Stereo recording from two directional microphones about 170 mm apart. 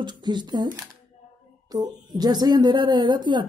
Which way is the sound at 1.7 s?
25° right (ahead or behind).